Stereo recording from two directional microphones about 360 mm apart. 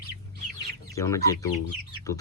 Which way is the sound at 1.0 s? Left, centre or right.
Centre.